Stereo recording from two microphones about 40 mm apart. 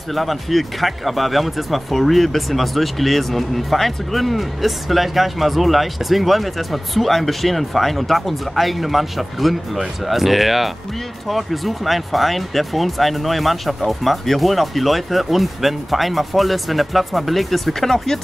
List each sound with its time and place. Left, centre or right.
0.1 s speech: centre